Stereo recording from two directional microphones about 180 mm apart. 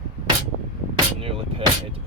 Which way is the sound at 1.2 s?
30° right (ahead or behind).